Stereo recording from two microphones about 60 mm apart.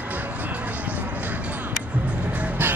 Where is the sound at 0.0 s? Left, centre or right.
Right.